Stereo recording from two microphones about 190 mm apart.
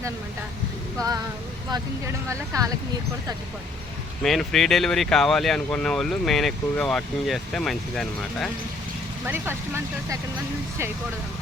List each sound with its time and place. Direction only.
1.7 s speech: 15° right (ahead or behind)
4.2 s speech: centre (ahead or behind)
9.2 s speech: 10° right (ahead or behind)